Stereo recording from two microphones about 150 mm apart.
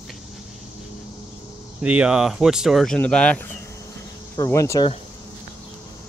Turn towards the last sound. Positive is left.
turn(degrees=20)  # may be behind; listen again after turning